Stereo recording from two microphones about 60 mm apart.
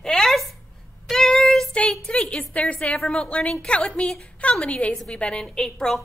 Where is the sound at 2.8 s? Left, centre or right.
Centre.